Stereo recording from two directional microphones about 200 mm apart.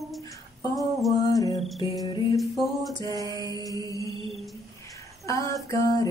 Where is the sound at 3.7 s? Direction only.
15° left (ahead or behind).